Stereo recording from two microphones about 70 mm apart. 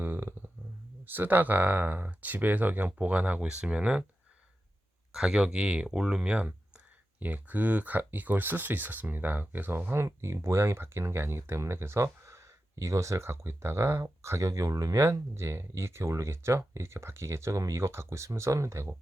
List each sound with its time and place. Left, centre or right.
0.0 s a sound: right
1.0 s speech: right
5.1 s speech: centre; by 18.9 s right